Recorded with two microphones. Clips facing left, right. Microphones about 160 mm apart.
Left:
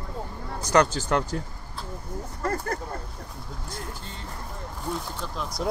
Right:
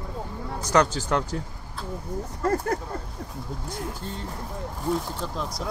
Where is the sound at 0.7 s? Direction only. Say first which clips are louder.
Left 1 dB; centre (ahead or behind).